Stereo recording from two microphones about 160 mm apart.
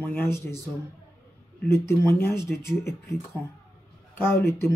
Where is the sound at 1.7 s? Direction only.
15° left (ahead or behind).